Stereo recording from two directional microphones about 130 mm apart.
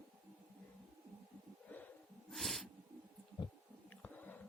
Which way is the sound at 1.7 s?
10° left (ahead or behind).